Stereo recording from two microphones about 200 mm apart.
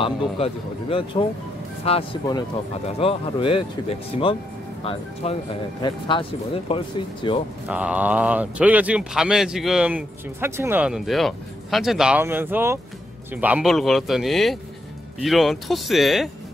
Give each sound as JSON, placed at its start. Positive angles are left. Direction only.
{"t": 0.0, "sound": "speech", "side_deg": 25}
{"t": 7.6, "sound": "speech", "side_deg": -5}